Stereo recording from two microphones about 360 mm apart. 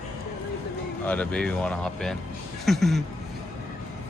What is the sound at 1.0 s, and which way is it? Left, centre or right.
Speech, centre.